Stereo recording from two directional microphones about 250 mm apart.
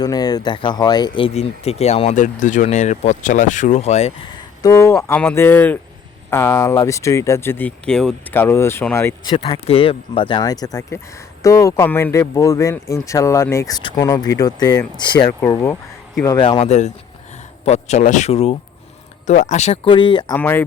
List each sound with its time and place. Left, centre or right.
0.0 s speech: centre
4.6 s speech: centre
20.3 s speech: centre